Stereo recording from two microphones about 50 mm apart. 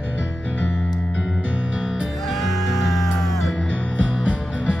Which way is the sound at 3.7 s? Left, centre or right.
Left.